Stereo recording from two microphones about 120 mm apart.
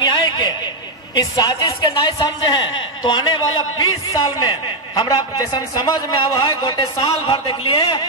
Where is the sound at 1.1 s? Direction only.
30° left (ahead or behind).